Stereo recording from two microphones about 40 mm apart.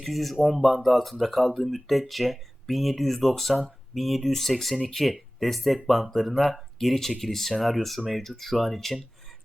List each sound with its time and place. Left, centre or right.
0.0 s speech: centre